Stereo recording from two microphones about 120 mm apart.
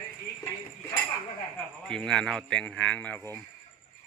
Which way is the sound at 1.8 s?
5° left (ahead or behind).